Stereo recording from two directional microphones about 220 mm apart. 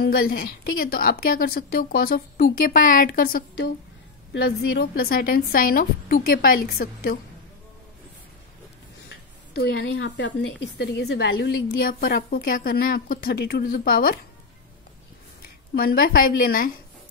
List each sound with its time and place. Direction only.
0.0 s a woman's voice: 45° left (ahead or behind)
9.6 s a woman's voice: 50° left (ahead or behind)
15.7 s a woman's voice: 40° left (ahead or behind)